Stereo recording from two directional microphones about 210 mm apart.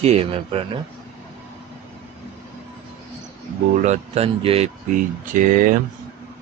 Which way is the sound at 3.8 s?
30° right (ahead or behind).